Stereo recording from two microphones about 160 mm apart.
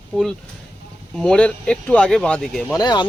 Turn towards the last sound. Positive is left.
turn(degrees=25)  # may be behind; listen again after turning